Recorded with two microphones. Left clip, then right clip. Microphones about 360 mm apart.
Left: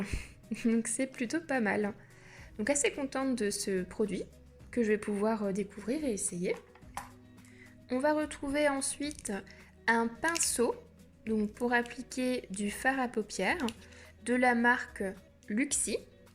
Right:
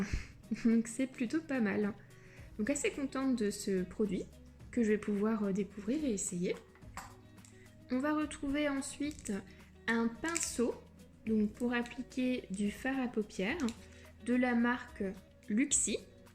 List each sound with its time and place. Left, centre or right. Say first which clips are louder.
0.0 s a woman's voice: left 1 dB; centre
7.9 s a woman's voice: left 5 dB; centre